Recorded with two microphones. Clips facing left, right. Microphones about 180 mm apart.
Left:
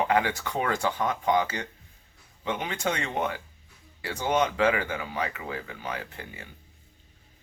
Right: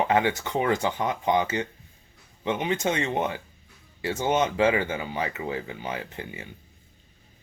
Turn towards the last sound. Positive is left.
turn(degrees=-25)  # may be behind; listen again after turning